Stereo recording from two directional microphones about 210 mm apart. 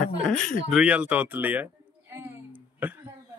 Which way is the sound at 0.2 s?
5° left (ahead or behind).